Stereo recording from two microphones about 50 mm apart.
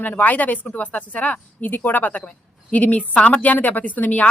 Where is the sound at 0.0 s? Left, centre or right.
Left.